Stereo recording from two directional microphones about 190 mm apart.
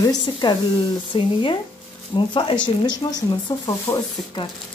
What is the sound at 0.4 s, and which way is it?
Speech, 25° left (ahead or behind).